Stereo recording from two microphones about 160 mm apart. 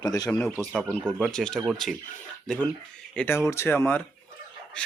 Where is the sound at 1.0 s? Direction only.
5° right (ahead or behind); by 4.0 s 15° left (ahead or behind).